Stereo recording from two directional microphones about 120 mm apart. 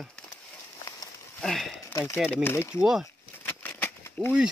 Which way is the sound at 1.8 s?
20° left (ahead or behind).